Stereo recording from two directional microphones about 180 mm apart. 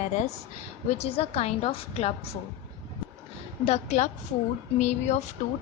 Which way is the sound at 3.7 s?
40° left (ahead or behind).